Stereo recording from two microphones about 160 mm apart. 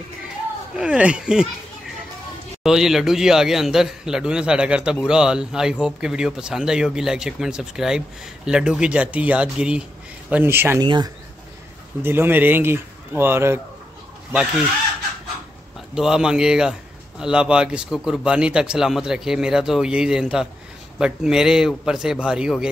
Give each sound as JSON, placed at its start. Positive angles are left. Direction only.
{"t": 0.7, "sound": "speech", "side_deg": -5}
{"t": 2.6, "sound": "a man's voice", "side_deg": -5}
{"t": 10.8, "sound": "speech", "side_deg": -30}
{"t": 12.0, "sound": "speech", "side_deg": -15}
{"t": 15.9, "sound": "a man's voice", "side_deg": -5}